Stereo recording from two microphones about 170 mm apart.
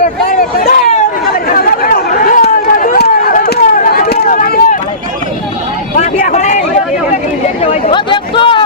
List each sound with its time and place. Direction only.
0.3 s vehicle: 60° left (ahead or behind)
1.5 s chatter: 55° left (ahead or behind)
6.0 s a sound: 45° left (ahead or behind); by 8.6 s 30° left (ahead or behind)